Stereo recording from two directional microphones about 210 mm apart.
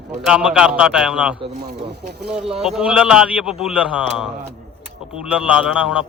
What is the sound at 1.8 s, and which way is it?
Speech, 50° right (ahead or behind).